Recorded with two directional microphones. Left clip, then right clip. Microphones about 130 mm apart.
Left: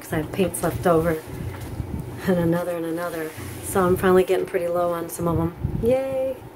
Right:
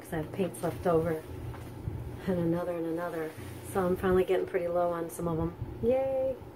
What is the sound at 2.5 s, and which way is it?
Speech, 50° left (ahead or behind).